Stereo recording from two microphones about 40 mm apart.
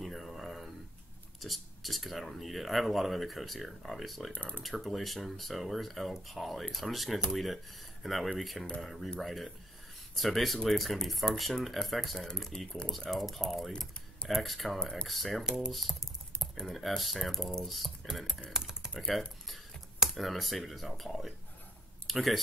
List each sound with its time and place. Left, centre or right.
0.0 s a sound: centre
1.4 s speech: centre
4.3 s speech: left
4.6 s speech: centre
12.4 s speech: centre
13.1 s speech: centre
15.4 s speech: centre
15.7 s speech: centre
18.5 s typing: centre
18.9 s speech: centre